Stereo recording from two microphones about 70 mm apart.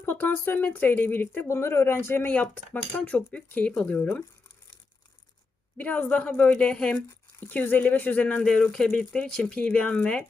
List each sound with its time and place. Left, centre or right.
0.0 s speech: left
1.5 s speech: left; by 3.8 s centre
5.7 s speech: left
7.3 s speech: left